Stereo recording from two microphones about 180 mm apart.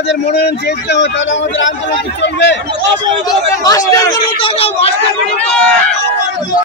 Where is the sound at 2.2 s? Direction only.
80° left.